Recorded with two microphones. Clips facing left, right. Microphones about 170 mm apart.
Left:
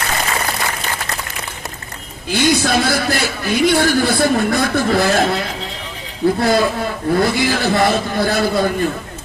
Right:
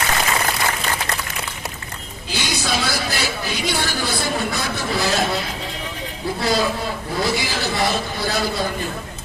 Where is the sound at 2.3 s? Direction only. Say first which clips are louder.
Left 9 dB; 55° left (ahead or behind).